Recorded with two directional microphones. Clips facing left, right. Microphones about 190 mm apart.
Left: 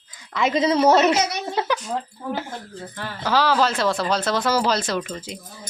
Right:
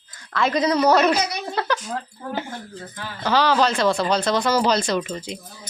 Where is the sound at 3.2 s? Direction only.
5° left (ahead or behind).